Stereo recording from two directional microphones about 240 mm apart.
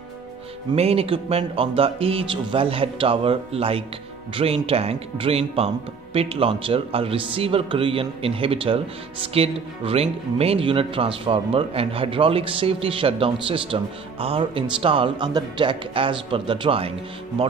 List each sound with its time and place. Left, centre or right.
0.7 s speech: right